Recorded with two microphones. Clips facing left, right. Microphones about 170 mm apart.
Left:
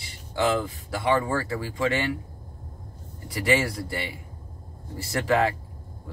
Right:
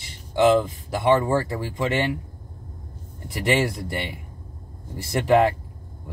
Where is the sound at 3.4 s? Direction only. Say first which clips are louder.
Right 2 dB; 20° right (ahead or behind).